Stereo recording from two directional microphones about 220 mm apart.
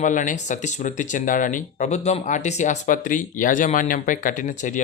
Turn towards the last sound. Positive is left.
turn(degrees=35)  # may be behind; listen again after turning